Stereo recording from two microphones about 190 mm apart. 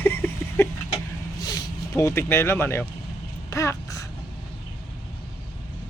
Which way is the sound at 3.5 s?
15° left (ahead or behind).